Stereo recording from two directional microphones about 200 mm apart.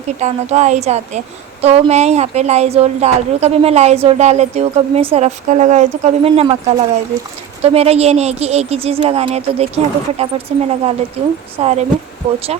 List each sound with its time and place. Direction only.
0.2 s speech: 35° right (ahead or behind)